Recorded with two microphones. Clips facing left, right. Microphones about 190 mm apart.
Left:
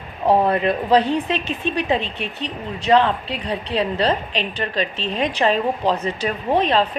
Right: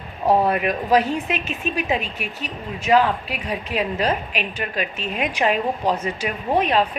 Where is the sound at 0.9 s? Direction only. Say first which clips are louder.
Left 1 dB; 35° left (ahead or behind).